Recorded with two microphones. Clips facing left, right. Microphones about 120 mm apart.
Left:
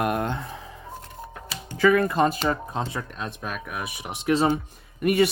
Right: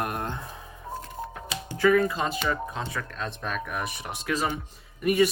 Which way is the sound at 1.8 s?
70° left (ahead or behind).